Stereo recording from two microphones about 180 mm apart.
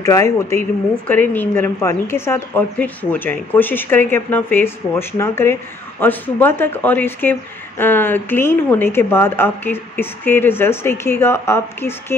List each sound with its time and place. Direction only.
0.0 s speech: 15° left (ahead or behind)